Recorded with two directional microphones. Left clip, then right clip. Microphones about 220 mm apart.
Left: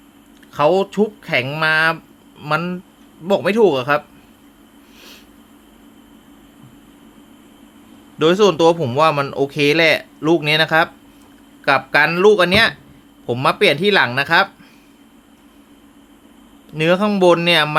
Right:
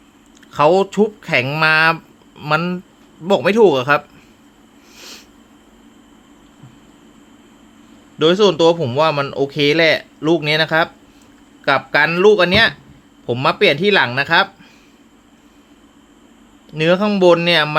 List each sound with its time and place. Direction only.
0.5 s speech: 10° right (ahead or behind)
4.9 s a sound: 15° right (ahead or behind)
8.2 s speech: 5° left (ahead or behind)
16.7 s speech: centre (ahead or behind)